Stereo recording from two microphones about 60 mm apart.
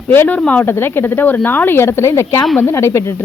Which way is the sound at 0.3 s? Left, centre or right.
Left.